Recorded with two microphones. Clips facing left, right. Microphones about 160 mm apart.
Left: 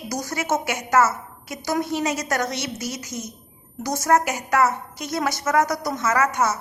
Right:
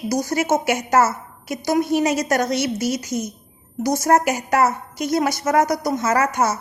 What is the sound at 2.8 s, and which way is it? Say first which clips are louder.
Speech: right 8 dB; 85° right.